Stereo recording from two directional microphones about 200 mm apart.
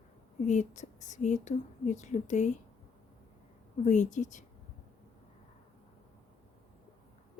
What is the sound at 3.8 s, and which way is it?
Speech, 35° left (ahead or behind).